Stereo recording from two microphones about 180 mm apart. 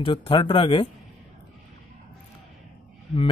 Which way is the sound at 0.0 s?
30° left (ahead or behind).